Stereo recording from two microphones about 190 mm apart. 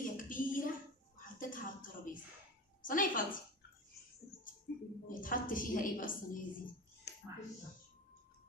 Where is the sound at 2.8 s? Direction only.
45° left (ahead or behind).